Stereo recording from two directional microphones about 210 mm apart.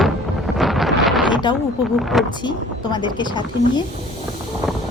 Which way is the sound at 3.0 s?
20° left (ahead or behind).